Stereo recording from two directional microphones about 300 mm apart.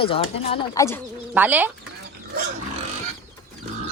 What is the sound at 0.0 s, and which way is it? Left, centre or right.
Speech, centre.